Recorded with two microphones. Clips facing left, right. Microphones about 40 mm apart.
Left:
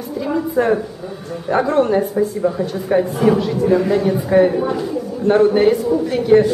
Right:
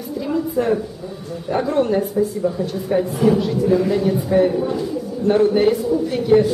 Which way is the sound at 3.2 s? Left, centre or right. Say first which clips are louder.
Right 1 dB; centre.